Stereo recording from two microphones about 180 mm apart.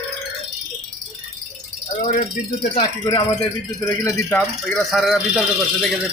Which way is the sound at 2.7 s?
30° left (ahead or behind).